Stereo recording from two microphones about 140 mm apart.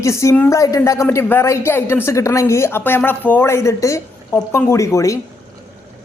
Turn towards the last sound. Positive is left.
turn(degrees=20)  # may be behind; listen again after turning